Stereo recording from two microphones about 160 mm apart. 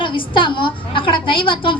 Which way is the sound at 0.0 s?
30° left (ahead or behind).